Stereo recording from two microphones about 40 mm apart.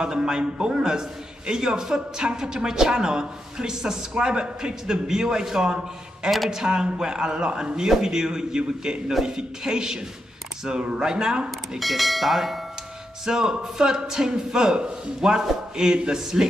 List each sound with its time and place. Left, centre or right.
0.0 s a man's voice: centre
11.8 s speech: centre
13.2 s a woman's voice: centre